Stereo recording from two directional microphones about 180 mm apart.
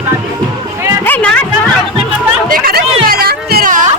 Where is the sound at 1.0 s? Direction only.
10° left (ahead or behind).